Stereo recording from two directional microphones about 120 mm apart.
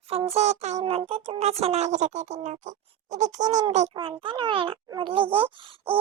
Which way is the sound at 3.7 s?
70° right (ahead or behind).